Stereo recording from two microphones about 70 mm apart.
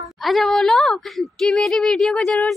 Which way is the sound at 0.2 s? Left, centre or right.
Centre.